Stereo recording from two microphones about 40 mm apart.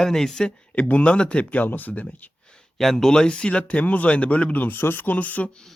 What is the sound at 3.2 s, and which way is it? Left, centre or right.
Speech, left.